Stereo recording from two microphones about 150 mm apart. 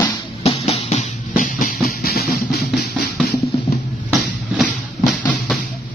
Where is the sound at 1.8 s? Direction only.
90° left.